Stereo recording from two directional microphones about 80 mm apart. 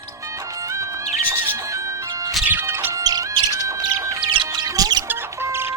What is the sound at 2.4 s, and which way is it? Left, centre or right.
Music, right.